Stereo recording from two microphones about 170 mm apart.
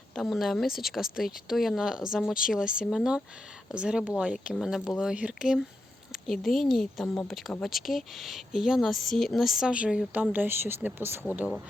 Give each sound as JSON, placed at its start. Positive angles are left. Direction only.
{"t": 0.1, "sound": "speech", "side_deg": 0}